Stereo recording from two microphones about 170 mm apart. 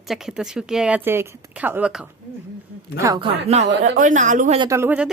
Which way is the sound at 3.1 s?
35° right (ahead or behind).